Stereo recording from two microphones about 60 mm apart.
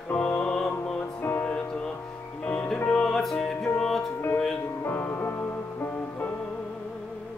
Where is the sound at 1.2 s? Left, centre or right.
Left.